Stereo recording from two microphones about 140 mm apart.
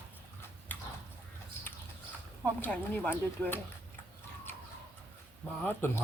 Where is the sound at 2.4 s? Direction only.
10° left (ahead or behind).